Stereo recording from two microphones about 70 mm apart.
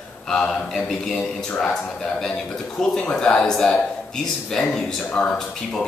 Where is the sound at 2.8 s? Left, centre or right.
Centre.